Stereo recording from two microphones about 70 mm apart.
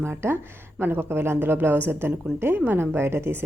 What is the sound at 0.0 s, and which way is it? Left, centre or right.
Speech, right.